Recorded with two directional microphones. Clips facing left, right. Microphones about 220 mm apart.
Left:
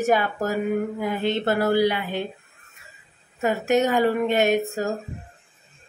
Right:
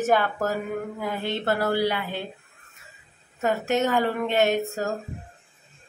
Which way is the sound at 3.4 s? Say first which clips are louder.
Left 3 dB; 15° left (ahead or behind).